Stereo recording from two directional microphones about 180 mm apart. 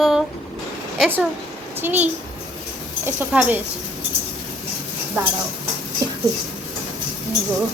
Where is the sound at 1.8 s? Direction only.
10° right (ahead or behind).